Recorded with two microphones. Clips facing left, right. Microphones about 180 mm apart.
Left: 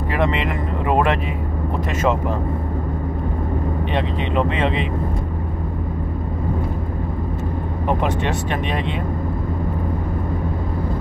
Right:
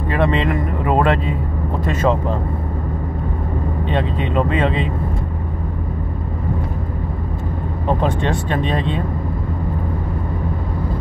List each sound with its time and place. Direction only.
0.1 s speech: 20° left (ahead or behind)
3.9 s speech: 25° left (ahead or behind)
8.0 s speech: 15° left (ahead or behind)